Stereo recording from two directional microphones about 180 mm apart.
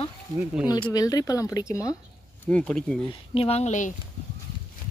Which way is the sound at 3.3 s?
35° left (ahead or behind).